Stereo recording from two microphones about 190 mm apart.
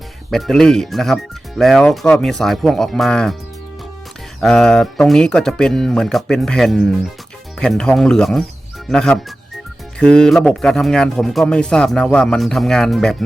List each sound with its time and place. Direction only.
0.3 s speech: centre (ahead or behind)
4.4 s speech: 5° left (ahead or behind)